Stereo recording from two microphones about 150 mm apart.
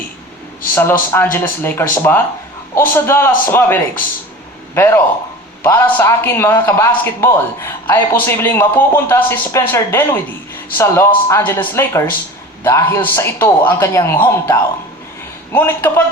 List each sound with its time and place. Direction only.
0.7 s speech: 15° left (ahead or behind)